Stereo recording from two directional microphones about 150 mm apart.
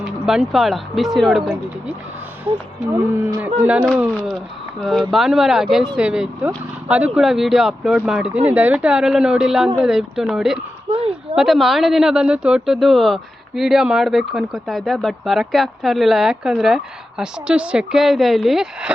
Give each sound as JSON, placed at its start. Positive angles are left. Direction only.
{"t": 0.0, "sound": "speech", "side_deg": 0}
{"t": 3.4, "sound": "speech", "side_deg": -10}
{"t": 4.1, "sound": "speech", "side_deg": 10}
{"t": 10.8, "sound": "a sound", "side_deg": -40}
{"t": 11.3, "sound": "speech", "side_deg": 0}